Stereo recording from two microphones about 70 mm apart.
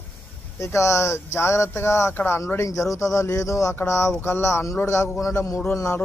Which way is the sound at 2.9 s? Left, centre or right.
Left.